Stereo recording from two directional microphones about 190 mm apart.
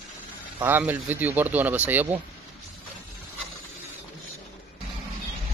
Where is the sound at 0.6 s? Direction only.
10° right (ahead or behind).